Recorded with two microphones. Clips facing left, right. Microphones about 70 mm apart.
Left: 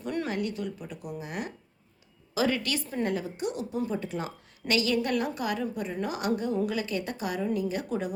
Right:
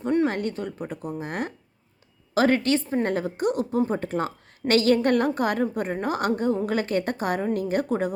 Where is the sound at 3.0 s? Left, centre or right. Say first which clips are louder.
Right 6 dB; right.